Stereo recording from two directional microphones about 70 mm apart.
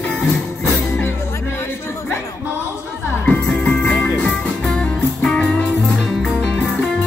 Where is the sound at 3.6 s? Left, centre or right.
Centre.